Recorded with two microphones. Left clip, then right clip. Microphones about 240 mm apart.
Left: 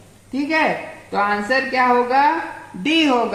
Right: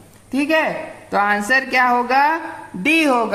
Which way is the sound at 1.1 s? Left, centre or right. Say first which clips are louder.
Right 2 dB; right.